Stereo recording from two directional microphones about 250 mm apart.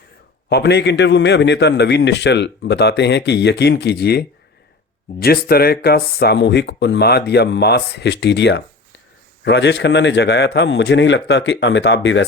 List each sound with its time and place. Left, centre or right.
0.5 s a man's voice: left